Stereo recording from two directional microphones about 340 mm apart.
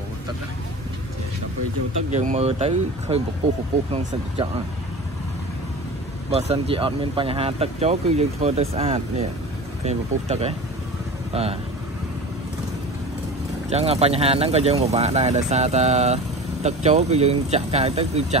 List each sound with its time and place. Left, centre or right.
2.0 s speech: right
6.3 s speech: centre
13.7 s speech: centre